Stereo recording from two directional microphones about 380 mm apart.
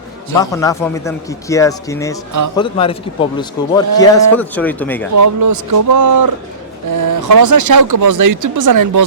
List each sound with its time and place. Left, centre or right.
0.3 s a man's voice: centre
5.1 s speech: right